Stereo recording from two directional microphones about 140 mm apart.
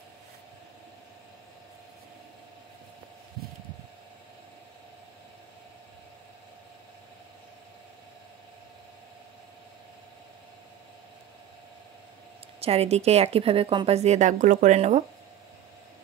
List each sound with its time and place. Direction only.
12.5 s a woman's voice: 45° right (ahead or behind)